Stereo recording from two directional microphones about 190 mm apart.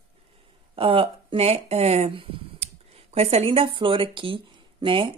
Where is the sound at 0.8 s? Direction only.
30° right (ahead or behind).